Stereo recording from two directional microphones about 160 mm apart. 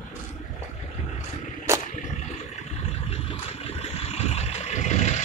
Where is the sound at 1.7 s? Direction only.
15° right (ahead or behind).